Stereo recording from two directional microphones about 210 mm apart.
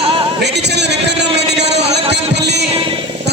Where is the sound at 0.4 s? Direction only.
55° right (ahead or behind).